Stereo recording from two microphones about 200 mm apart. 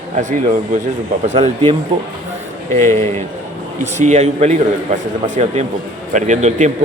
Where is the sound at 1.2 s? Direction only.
35° right (ahead or behind).